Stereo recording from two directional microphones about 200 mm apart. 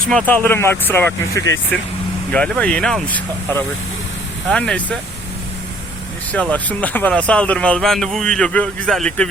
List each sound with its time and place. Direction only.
0.3 s speech: 10° left (ahead or behind)
6.3 s speech: 5° left (ahead or behind)